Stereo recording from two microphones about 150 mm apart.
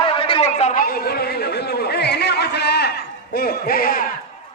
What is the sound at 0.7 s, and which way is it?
Speech, 80° left.